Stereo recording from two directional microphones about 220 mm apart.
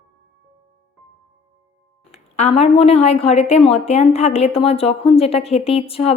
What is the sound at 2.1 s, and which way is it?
A woman's voice, 30° left (ahead or behind).